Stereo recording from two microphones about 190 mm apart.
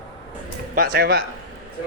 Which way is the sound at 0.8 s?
55° right (ahead or behind).